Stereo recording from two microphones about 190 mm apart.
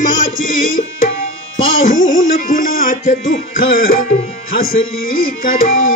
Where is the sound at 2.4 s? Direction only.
45° left (ahead or behind).